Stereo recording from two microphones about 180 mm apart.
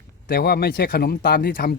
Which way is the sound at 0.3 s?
60° left (ahead or behind).